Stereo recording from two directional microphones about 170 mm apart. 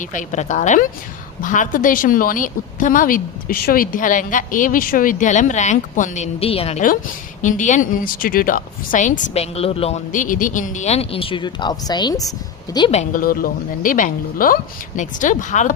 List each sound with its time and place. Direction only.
0.1 s a woman's voice: 50° left (ahead or behind)
7.4 s a woman's voice: 45° left (ahead or behind)
10.1 s speech: 50° left (ahead or behind); by 12.2 s 25° left (ahead or behind)
12.9 s speech: 40° left (ahead or behind)
13.2 s a woman's voice: 55° left (ahead or behind)